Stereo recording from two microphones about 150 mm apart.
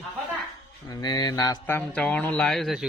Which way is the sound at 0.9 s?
25° left (ahead or behind).